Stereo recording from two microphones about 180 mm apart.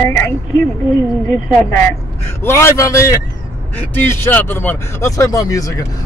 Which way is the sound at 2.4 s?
15° left (ahead or behind).